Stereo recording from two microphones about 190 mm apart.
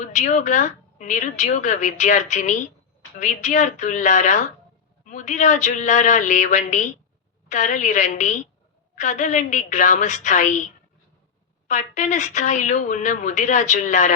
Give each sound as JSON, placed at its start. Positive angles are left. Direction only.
{"t": 0.0, "sound": "a woman's voice", "side_deg": 40}
{"t": 11.7, "sound": "a woman's voice", "side_deg": 40}